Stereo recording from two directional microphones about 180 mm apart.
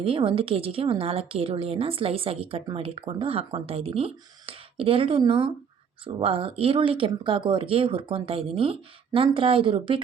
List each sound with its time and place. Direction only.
0.0 s speech: 30° right (ahead or behind)